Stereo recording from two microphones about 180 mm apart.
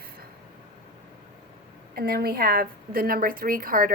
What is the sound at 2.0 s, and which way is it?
A woman's voice, 60° right (ahead or behind).